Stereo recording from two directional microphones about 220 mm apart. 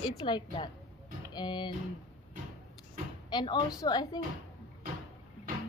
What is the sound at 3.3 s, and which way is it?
Speech, 20° left (ahead or behind).